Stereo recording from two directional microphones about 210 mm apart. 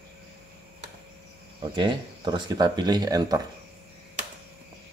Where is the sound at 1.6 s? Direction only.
20° right (ahead or behind).